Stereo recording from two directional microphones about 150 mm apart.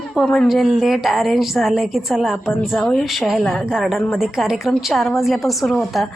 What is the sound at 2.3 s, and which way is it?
Speech, 15° left (ahead or behind).